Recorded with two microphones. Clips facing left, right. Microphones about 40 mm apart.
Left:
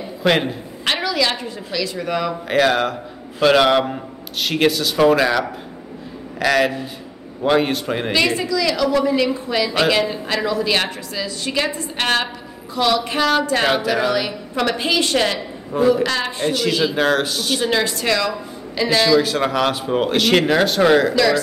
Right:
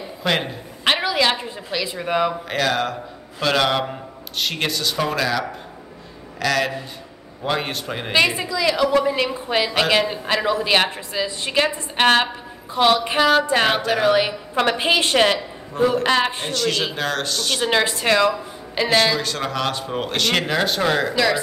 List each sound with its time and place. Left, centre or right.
0.2 s a woman's voice: centre
1.0 s a woman's voice: right
2.4 s a man's voice: centre
6.4 s a man's voice: centre
8.1 s a woman's voice: centre
13.7 s speech: centre
14.0 s a woman's voice: right
16.5 s a man's voice: centre
17.6 s a woman's voice: right
19.1 s speech: centre
21.1 s speech: centre